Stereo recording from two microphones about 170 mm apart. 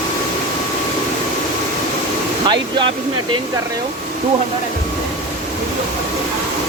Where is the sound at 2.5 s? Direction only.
30° right (ahead or behind).